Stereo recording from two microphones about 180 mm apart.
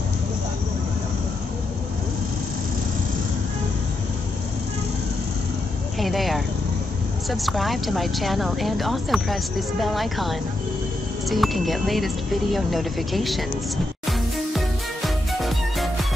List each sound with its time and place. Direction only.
5.9 s a woman's voice: centre (ahead or behind)
15.4 s music: centre (ahead or behind)